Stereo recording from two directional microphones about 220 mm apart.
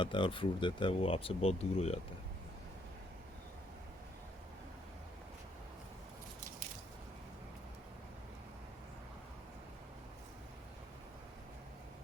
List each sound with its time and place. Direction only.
0.0 s speech: 20° left (ahead or behind)